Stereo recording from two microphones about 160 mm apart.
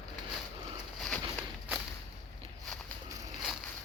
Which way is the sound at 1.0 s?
Centre (ahead or behind).